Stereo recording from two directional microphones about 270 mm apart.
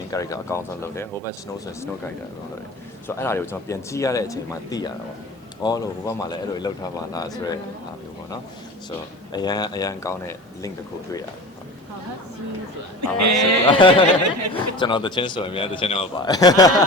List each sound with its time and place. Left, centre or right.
0.1 s a man's voice: centre
3.2 s a man's voice: centre
9.3 s a man's voice: centre
13.0 s speech: right
13.7 s a man's voice: centre